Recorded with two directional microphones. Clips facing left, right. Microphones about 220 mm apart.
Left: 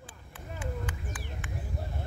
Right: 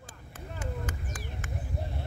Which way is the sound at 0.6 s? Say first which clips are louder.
Even; 40° right (ahead or behind).